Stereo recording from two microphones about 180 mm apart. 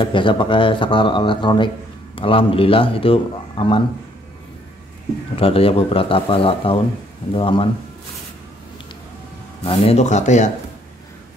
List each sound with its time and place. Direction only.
0.0 s speech: 25° left (ahead or behind)
5.3 s speech: 30° left (ahead or behind)
9.7 s speech: 35° left (ahead or behind)